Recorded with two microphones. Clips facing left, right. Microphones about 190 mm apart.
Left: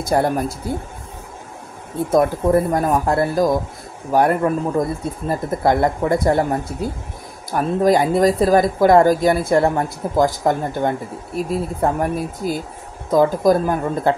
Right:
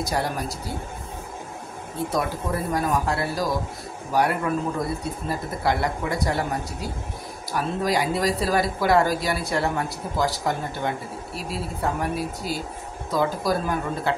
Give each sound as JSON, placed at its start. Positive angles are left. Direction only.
{"t": 0.0, "sound": "speech", "side_deg": 50}
{"t": 2.0, "sound": "speech", "side_deg": 50}